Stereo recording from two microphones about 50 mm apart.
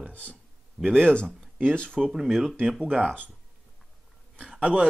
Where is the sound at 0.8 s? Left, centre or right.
Centre.